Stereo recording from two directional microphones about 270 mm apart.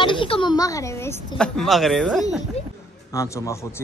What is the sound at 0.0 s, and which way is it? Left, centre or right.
A man's voice, centre.